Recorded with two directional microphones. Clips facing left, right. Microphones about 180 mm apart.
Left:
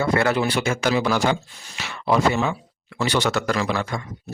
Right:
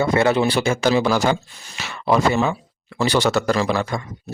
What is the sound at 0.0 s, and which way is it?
A man's voice, 20° right (ahead or behind).